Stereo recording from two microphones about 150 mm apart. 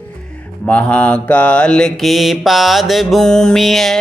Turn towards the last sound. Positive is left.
turn(degrees=0)  # may be behind; listen again after turning